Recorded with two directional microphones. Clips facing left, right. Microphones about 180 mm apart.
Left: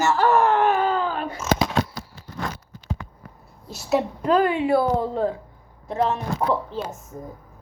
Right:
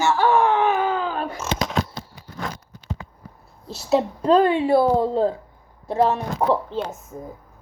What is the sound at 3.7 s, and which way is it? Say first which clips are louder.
A woman's voice: right 2 dB; 30° right (ahead or behind).